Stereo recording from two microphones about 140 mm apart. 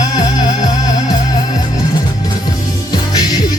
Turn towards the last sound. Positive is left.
turn(degrees=30)  # may be behind; listen again after turning